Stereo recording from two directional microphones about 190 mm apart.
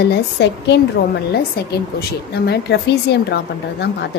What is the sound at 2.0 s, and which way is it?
A woman's voice, 60° left (ahead or behind).